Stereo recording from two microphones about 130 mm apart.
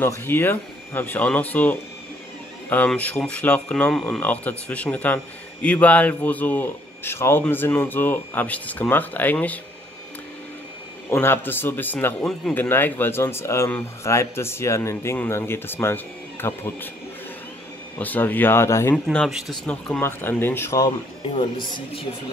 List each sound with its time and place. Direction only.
0.0 s speech: 15° left (ahead or behind)
2.9 s speech: 10° left (ahead or behind)
11.1 s speech: 15° left (ahead or behind)
12.2 s speech: 5° left (ahead or behind)
12.5 s speech: 15° left (ahead or behind)
17.9 s speech: 15° left (ahead or behind)
19.2 s speech: centre (ahead or behind); by 20.8 s 20° left (ahead or behind)
21.3 s speech: 40° left (ahead or behind)